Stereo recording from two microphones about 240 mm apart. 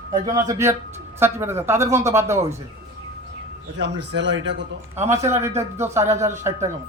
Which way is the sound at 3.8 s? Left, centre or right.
Right.